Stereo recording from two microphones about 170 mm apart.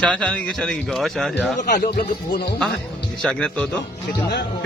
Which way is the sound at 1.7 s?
70° left (ahead or behind).